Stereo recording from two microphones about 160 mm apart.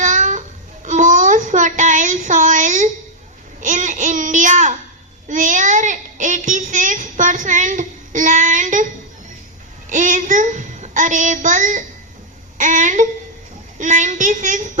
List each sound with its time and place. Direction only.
0.0 s babbling: 50° right (ahead or behind)
0.9 s a sound: 55° right (ahead or behind)
3.6 s a child's voice: 50° right (ahead or behind)
9.9 s a child's voice: 50° right (ahead or behind)